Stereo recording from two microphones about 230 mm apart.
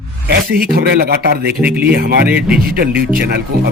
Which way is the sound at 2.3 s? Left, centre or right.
Centre.